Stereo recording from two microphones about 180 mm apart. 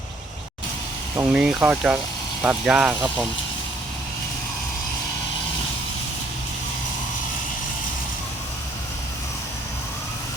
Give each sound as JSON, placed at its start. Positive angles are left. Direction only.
{"t": 1.1, "sound": "speech", "side_deg": -10}